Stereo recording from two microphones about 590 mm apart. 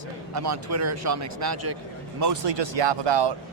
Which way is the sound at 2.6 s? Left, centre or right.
Right.